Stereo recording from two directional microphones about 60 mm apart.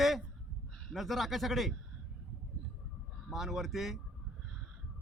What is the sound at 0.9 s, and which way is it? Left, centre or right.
Speech, centre.